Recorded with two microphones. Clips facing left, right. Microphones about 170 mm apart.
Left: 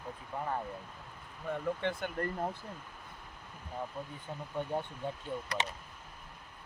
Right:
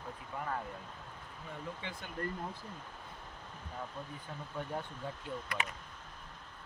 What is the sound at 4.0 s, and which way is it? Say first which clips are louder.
Speech: left 3 dB; 10° left (ahead or behind).